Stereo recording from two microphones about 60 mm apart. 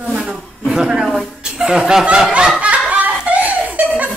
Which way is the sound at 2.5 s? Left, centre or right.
Right.